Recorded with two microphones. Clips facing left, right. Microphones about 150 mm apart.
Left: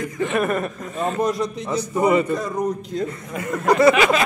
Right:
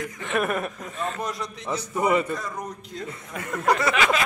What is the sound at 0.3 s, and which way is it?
Speech, centre (ahead or behind).